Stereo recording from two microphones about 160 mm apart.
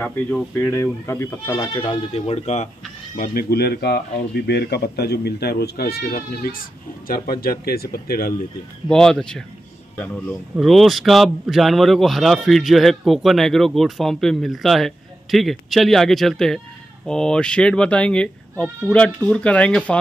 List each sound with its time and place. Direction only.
0.0 s speech: 10° left (ahead or behind)
1.8 s speech: 35° left (ahead or behind)
3.2 s speech: 75° left (ahead or behind)
8.8 s a man's voice: 5° left (ahead or behind)
10.5 s a man's voice: centre (ahead or behind)